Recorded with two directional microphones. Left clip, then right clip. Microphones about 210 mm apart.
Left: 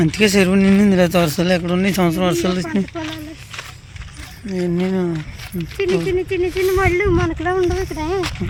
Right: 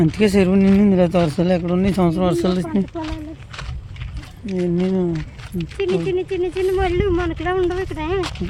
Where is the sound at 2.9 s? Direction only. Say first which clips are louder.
Left 1 dB; 10° left (ahead or behind).